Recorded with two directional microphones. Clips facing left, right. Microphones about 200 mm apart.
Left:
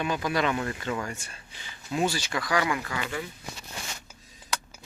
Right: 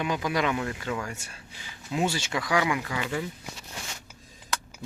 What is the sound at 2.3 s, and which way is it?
Speech, 10° right (ahead or behind).